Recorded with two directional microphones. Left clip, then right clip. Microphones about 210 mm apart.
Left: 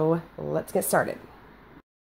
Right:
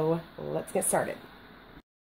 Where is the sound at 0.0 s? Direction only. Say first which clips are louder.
Left 4 dB; 20° left (ahead or behind).